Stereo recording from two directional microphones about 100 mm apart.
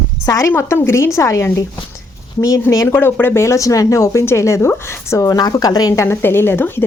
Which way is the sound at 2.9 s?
20° left (ahead or behind).